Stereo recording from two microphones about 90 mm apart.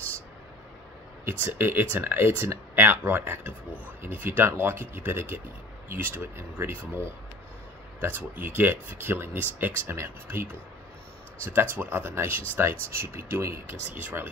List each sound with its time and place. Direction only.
1.2 s speech: 25° right (ahead or behind)
8.0 s speech: 25° right (ahead or behind)